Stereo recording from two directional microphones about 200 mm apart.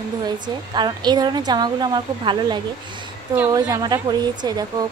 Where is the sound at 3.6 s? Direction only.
20° right (ahead or behind).